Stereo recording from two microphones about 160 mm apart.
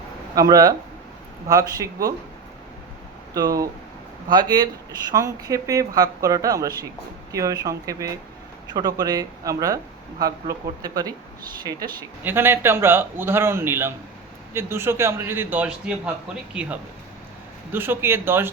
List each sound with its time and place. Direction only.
0.3 s speech: 20° right (ahead or behind)
3.3 s speech: 20° right (ahead or behind)
12.2 s a man's voice: 15° right (ahead or behind)